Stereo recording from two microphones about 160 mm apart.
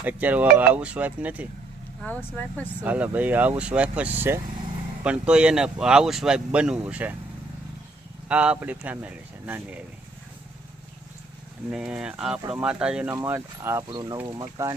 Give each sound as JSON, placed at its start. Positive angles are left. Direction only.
{"t": 0.0, "sound": "speech", "side_deg": -10}
{"t": 2.0, "sound": "speech", "side_deg": 10}
{"t": 2.8, "sound": "speech", "side_deg": -10}
{"t": 8.3, "sound": "speech", "side_deg": -10}
{"t": 11.7, "sound": "speech", "side_deg": -5}
{"t": 13.9, "sound": "speech", "side_deg": -25}
{"t": 14.6, "sound": "speech", "side_deg": -15}